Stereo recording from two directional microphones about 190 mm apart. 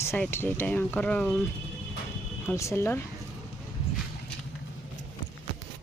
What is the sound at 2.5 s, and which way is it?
Speech, 15° left (ahead or behind).